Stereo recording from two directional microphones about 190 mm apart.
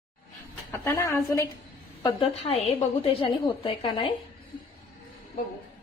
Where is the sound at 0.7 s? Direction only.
15° left (ahead or behind).